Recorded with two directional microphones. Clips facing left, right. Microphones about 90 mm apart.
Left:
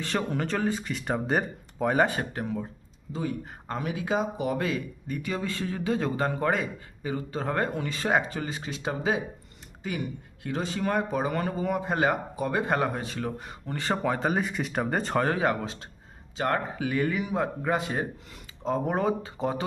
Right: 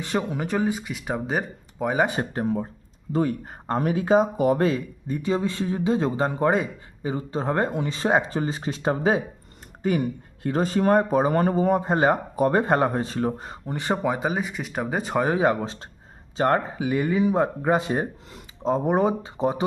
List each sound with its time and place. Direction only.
0.0 s speech: 15° right (ahead or behind)
2.0 s speech: 30° right (ahead or behind)
3.1 s speech: 50° right (ahead or behind); by 13.6 s 30° right (ahead or behind)
13.7 s speech: 20° right (ahead or behind)
15.3 s speech: 20° right (ahead or behind)
16.7 s speech: 20° right (ahead or behind)